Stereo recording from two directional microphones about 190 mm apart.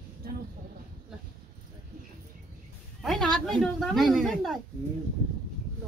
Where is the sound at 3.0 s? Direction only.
Centre (ahead or behind).